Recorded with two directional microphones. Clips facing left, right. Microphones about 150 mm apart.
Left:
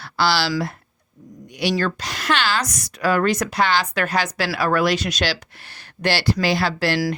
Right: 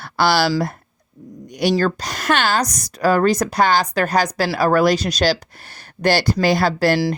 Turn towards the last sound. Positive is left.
turn(degrees=-45)  # may be behind; listen again after turning